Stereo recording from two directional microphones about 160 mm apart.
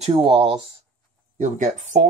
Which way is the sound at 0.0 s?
35° right (ahead or behind).